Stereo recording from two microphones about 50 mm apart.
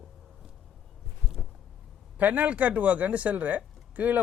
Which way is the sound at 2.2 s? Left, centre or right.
Right.